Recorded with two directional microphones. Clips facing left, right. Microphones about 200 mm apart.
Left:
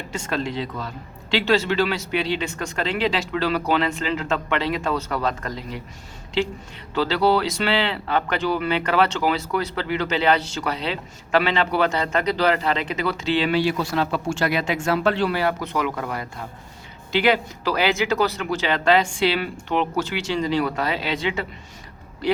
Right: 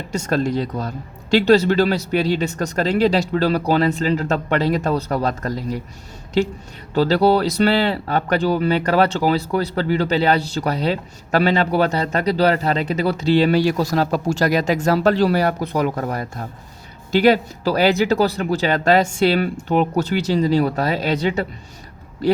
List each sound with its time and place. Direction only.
0.1 s speech: 40° right (ahead or behind)